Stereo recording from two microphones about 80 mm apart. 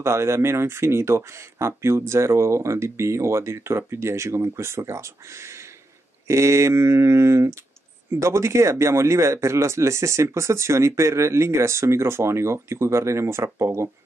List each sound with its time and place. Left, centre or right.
0.0 s speech: right